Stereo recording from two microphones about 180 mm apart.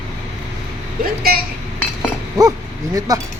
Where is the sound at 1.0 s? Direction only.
55° right (ahead or behind).